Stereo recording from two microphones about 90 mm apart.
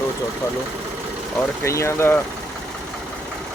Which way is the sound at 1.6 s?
30° left (ahead or behind).